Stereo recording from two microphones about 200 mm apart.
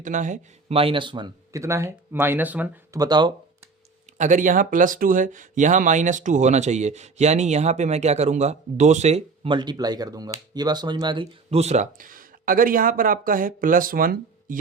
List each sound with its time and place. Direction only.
0.0 s speech: 40° right (ahead or behind); by 3.0 s 10° right (ahead or behind)
3.0 s speech: 20° right (ahead or behind)
4.2 s speech: 40° right (ahead or behind)